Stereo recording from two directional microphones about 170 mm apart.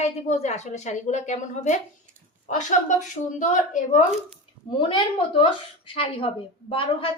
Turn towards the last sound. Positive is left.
turn(degrees=30)  # may be behind; listen again after turning